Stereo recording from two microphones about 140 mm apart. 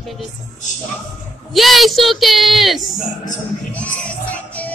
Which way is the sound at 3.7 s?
10° left (ahead or behind).